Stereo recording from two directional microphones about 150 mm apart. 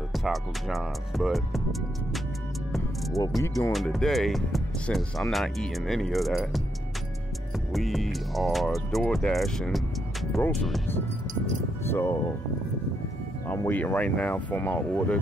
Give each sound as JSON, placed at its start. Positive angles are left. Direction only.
{"t": 0.1, "sound": "speech", "side_deg": 0}
{"t": 2.7, "sound": "music", "side_deg": 0}
{"t": 3.4, "sound": "speech", "side_deg": 20}
{"t": 3.7, "sound": "speech", "side_deg": 0}
{"t": 11.8, "sound": "speech", "side_deg": 15}
{"t": 13.6, "sound": "speech", "side_deg": 15}